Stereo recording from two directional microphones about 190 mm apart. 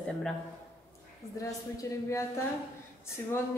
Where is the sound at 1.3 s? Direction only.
15° left (ahead or behind).